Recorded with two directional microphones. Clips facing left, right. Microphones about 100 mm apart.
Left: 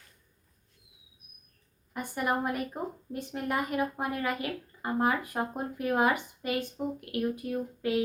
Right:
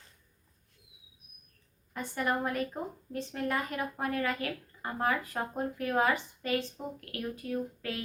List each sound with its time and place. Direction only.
1.9 s a woman's voice: 10° left (ahead or behind)